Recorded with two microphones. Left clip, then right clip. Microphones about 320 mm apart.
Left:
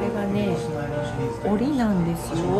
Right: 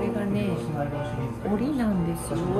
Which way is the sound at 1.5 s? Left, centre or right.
Centre.